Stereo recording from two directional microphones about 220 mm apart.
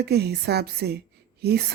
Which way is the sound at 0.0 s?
45° right (ahead or behind).